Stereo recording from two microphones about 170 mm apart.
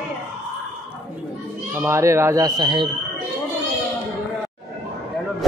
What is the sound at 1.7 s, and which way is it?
Speech, 15° right (ahead or behind).